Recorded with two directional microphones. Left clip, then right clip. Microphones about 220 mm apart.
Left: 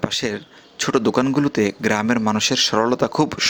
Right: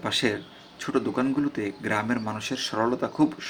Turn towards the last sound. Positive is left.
turn(degrees=45)  # may be behind; listen again after turning